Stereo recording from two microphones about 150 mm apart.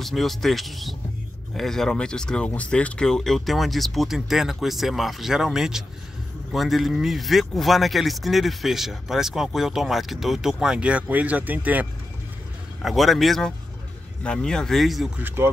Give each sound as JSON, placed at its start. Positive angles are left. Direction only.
{"t": 0.0, "sound": "speech", "side_deg": 0}
{"t": 12.8, "sound": "speech", "side_deg": 0}
{"t": 15.2, "sound": "speech", "side_deg": -15}